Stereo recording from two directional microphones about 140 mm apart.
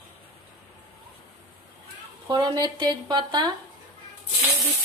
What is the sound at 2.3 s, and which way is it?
A woman's voice, 30° right (ahead or behind).